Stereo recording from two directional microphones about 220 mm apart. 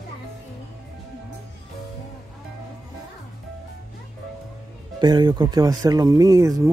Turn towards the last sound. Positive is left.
turn(degrees=-15)  # may be behind; listen again after turning